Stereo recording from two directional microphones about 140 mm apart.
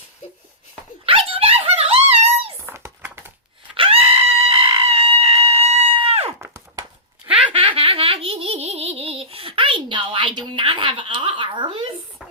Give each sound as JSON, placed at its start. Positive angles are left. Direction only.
{"t": 1.0, "sound": "dog", "side_deg": -40}
{"t": 2.6, "sound": "typing", "side_deg": -20}
{"t": 3.8, "sound": "screaming", "side_deg": -40}
{"t": 6.4, "sound": "a sound", "side_deg": -20}
{"t": 7.3, "sound": "a sound", "side_deg": -5}
{"t": 7.5, "sound": "laughter", "side_deg": -40}